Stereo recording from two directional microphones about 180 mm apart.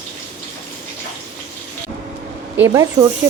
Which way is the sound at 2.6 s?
15° right (ahead or behind).